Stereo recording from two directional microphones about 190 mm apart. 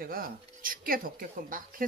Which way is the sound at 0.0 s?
50° right (ahead or behind).